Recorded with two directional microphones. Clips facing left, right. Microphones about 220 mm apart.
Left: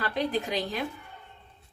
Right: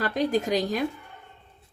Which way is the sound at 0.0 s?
45° right (ahead or behind).